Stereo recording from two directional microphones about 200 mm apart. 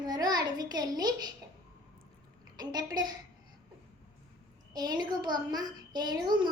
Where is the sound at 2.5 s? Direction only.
20° right (ahead or behind).